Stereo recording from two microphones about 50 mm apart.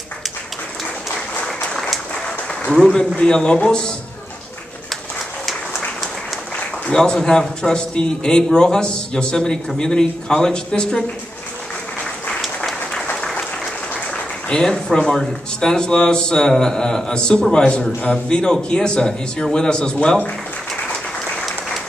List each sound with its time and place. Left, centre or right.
1.4 s applause: centre
2.2 s a sound: centre
3.2 s speech: centre
6.9 s speech: centre
13.1 s applause: centre
14.6 s speech: centre